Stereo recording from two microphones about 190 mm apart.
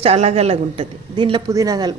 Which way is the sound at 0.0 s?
35° right (ahead or behind).